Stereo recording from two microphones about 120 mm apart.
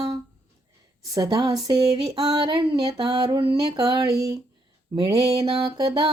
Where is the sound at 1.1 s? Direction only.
30° right (ahead or behind).